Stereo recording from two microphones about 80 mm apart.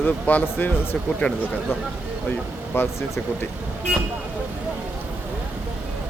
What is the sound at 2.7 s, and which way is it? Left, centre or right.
Speech, left.